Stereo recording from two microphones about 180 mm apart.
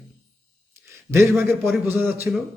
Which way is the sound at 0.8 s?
15° right (ahead or behind).